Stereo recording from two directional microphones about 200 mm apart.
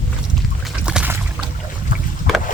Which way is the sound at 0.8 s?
5° right (ahead or behind).